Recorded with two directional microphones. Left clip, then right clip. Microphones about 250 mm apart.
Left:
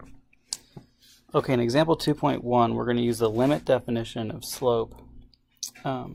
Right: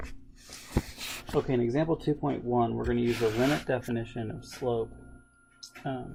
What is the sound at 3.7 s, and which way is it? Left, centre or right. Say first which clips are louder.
Speech: left 7 dB; centre.